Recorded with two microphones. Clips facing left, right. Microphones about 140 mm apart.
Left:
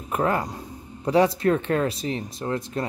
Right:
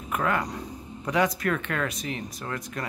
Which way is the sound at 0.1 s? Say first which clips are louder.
Left 3 dB; 30° left (ahead or behind).